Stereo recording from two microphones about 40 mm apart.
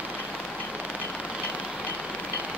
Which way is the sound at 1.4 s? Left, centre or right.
Left.